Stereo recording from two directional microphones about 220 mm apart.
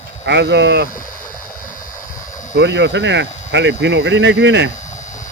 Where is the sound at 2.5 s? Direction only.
50° right (ahead or behind).